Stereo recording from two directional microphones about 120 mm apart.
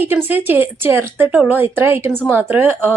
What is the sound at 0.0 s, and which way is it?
Speech, 15° right (ahead or behind).